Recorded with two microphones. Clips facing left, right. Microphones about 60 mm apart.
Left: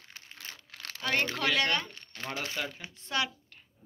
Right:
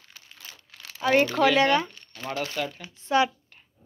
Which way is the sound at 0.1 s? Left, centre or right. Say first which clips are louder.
Left 1 dB; left.